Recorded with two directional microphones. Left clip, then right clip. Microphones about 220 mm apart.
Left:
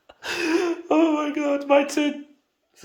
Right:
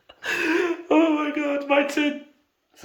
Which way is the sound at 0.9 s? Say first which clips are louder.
Even; centre (ahead or behind).